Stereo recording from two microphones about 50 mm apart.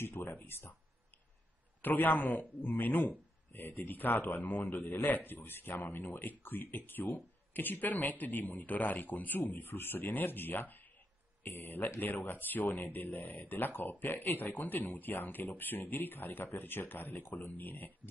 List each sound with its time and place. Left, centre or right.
0.0 s speech: left
1.8 s speech: left